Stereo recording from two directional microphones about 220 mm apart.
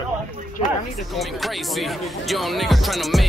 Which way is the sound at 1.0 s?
Centre (ahead or behind).